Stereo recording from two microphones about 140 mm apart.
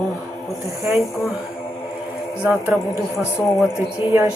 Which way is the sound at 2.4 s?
10° right (ahead or behind).